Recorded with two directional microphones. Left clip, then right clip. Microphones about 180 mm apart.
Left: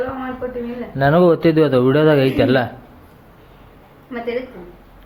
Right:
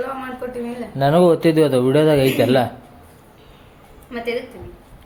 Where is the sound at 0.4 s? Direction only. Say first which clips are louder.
Left 4 dB; 20° right (ahead or behind).